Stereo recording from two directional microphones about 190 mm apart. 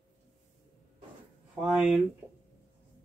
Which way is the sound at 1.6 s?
5° right (ahead or behind).